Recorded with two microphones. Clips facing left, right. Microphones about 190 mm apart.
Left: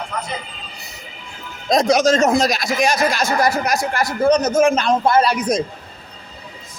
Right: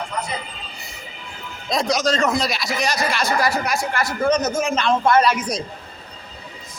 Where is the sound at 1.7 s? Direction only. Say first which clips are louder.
Left 6 dB; 45° left (ahead or behind).